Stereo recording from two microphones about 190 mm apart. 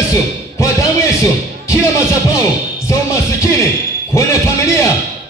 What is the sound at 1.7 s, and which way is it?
Music, 15° left (ahead or behind).